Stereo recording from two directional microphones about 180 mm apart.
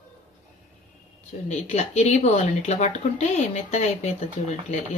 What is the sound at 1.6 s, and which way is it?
Speech, 40° left (ahead or behind).